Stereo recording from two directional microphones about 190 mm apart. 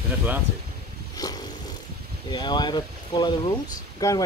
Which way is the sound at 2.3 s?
20° left (ahead or behind).